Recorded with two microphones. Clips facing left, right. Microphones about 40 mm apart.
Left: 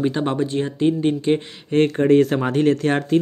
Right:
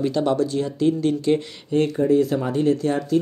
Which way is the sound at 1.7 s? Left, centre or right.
Left.